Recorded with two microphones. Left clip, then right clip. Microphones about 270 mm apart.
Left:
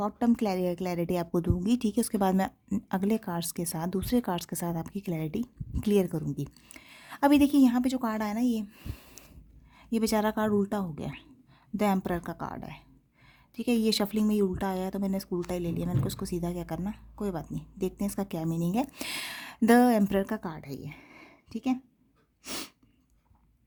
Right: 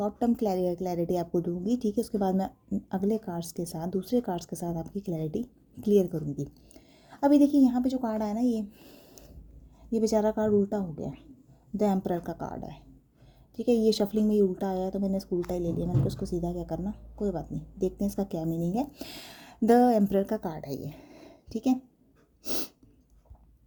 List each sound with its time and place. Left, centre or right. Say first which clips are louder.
0.0 s a woman's voice: even; left
11.8 s a woman's voice: right 1 dB; left